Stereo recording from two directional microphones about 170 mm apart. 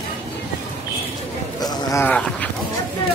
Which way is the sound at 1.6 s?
20° left (ahead or behind).